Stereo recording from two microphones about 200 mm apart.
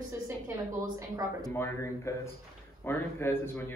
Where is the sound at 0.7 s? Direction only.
15° right (ahead or behind).